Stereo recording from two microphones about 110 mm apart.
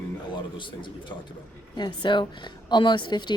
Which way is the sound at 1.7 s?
45° left (ahead or behind).